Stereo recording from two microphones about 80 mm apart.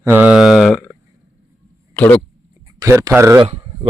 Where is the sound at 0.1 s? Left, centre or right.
Centre.